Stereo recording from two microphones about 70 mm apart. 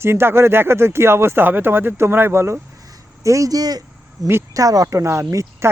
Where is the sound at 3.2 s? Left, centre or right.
Right.